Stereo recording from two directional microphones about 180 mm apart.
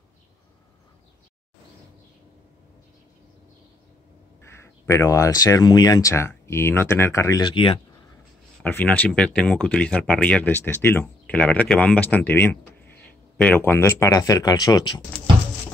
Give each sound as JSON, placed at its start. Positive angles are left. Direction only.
{"t": 4.5, "sound": "speech", "side_deg": 15}
{"t": 8.6, "sound": "speech", "side_deg": 10}